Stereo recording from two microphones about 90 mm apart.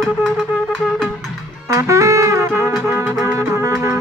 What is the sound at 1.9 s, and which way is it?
Music, 35° right (ahead or behind).